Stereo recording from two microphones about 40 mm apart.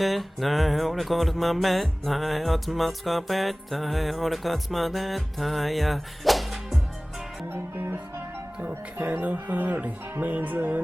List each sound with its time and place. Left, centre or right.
0.0 s music: centre
7.5 s music: right
9.0 s speech: right
9.2 s music: right